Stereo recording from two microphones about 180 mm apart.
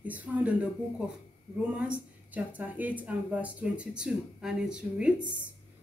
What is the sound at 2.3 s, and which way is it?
Speech, 10° right (ahead or behind).